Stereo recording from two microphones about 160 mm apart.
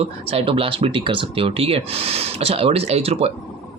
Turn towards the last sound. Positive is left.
turn(degrees=-40)  # may be behind; listen again after turning